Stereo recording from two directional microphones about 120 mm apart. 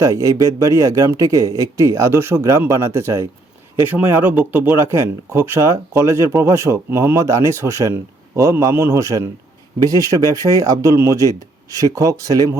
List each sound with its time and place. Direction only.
0.0 s speech: 25° right (ahead or behind)